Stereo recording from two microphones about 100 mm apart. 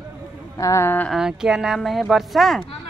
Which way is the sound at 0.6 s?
35° left (ahead or behind).